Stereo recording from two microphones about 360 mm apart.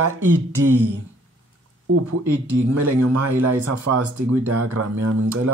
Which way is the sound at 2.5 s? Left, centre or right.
Right.